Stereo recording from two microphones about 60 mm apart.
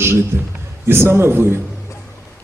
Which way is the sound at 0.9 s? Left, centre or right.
Right.